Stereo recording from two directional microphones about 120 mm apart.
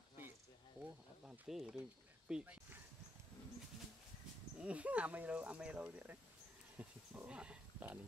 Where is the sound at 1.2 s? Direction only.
5° right (ahead or behind).